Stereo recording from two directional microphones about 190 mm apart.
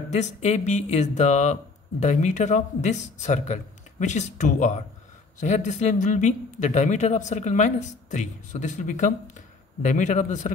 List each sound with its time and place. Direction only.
0.1 s speech: 35° left (ahead or behind)